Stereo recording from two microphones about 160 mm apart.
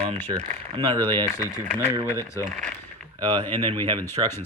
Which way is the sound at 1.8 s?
15° right (ahead or behind).